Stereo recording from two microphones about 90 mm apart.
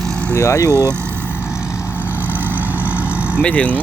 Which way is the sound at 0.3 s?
35° left (ahead or behind).